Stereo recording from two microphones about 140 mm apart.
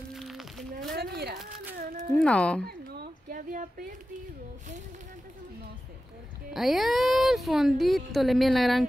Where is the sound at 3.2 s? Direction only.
85° right.